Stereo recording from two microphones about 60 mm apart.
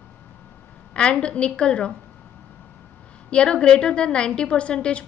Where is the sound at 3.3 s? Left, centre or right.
Centre.